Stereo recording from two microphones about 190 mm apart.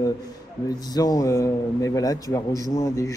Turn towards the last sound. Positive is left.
turn(degrees=15)  # may be behind; listen again after turning